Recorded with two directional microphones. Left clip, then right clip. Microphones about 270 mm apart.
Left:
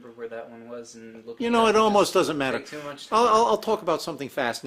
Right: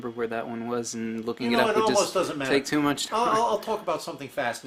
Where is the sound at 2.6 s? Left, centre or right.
Right.